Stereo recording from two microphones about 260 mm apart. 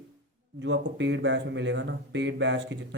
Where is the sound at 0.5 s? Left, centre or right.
Right.